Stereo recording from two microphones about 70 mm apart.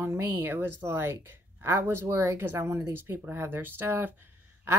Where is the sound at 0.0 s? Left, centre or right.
Right.